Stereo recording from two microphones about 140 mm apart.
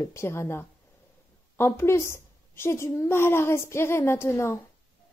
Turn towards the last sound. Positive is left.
turn(degrees=20)  # may be behind; listen again after turning